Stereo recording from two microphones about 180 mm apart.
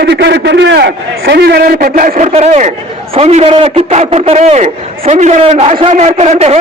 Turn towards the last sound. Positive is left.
turn(degrees=-35)  # may be behind; listen again after turning